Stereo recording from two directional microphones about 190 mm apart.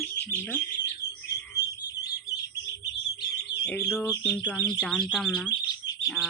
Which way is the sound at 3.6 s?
5° left (ahead or behind).